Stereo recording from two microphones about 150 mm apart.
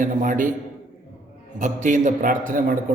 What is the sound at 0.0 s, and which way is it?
Speech, 60° right (ahead or behind).